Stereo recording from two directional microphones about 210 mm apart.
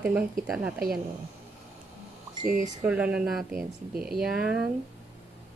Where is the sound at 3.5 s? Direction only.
45° right (ahead or behind).